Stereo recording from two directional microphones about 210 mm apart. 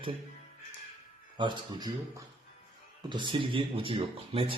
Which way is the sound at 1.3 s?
20° right (ahead or behind).